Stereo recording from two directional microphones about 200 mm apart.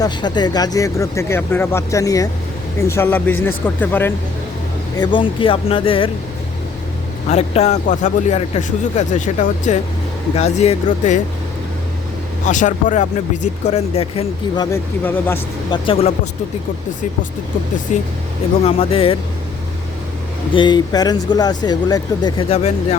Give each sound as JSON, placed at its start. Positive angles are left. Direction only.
{"t": 0.0, "sound": "speech", "side_deg": 20}
{"t": 4.9, "sound": "speech", "side_deg": 25}
{"t": 7.3, "sound": "speech", "side_deg": 35}
{"t": 12.5, "sound": "speech", "side_deg": 40}
{"t": 15.7, "sound": "speech", "side_deg": 30}
{"t": 17.9, "sound": "speech", "side_deg": 35}
{"t": 20.5, "sound": "speech", "side_deg": 25}